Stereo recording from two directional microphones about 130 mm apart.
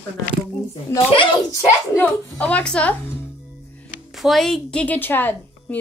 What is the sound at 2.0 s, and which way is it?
A woman's voice, 15° left (ahead or behind).